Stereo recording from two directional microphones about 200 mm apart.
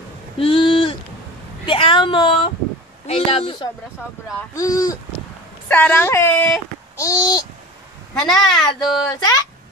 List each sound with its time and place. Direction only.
0.4 s a sound: 25° left (ahead or behind)
1.7 s speech: 25° left (ahead or behind)
8.1 s speech: 5° left (ahead or behind)